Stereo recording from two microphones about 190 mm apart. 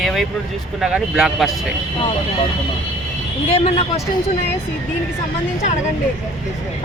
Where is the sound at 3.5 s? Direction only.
35° left (ahead or behind).